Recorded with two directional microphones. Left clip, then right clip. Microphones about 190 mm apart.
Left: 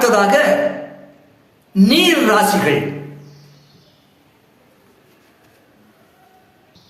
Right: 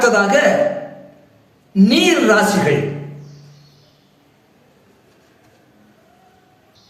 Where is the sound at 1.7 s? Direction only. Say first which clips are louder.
Left 1 dB; 5° left (ahead or behind).